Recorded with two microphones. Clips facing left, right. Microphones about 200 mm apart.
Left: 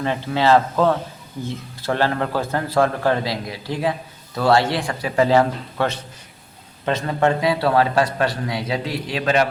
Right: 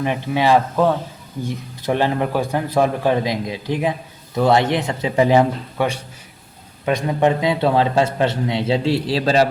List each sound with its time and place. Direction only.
0.0 s a man's voice: 15° right (ahead or behind); by 9.5 s 30° right (ahead or behind)